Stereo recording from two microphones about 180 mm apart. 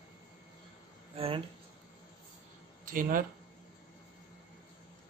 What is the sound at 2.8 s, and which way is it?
Speech, 50° right (ahead or behind).